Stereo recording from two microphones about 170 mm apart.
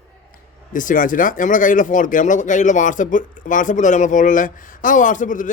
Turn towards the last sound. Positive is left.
turn(degrees=50)  # may be behind; listen again after turning